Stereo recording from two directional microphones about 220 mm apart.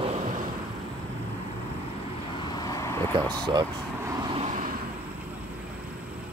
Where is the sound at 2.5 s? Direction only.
15° left (ahead or behind).